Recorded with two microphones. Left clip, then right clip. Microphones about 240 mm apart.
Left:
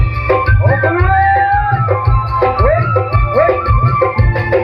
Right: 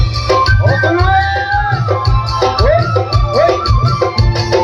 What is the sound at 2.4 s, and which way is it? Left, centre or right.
Music, right.